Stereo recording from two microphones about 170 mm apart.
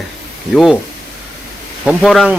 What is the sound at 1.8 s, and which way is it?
Speech, centre (ahead or behind).